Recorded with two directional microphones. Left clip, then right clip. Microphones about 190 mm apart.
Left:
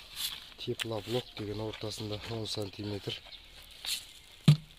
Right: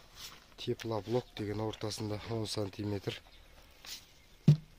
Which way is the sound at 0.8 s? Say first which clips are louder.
Even; 25° right (ahead or behind).